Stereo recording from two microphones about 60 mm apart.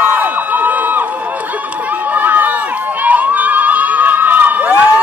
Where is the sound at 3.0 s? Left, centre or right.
Right.